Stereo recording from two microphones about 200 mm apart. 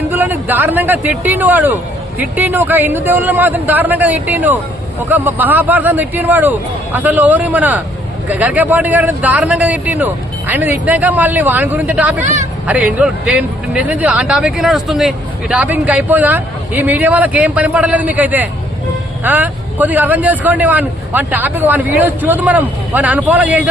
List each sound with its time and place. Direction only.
0.1 s speech: 10° right (ahead or behind)
12.2 s speech: 35° right (ahead or behind)
12.6 s speech: 5° right (ahead or behind)